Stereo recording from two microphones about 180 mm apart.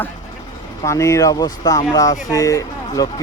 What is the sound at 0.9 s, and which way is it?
Speech, 15° left (ahead or behind).